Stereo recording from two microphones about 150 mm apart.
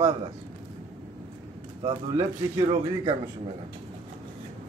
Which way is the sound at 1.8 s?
35° right (ahead or behind).